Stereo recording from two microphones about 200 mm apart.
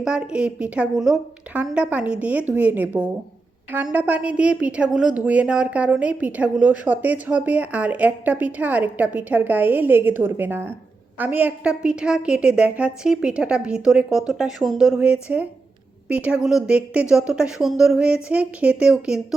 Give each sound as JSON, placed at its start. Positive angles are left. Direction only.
{"t": 0.0, "sound": "a woman's voice", "side_deg": -5}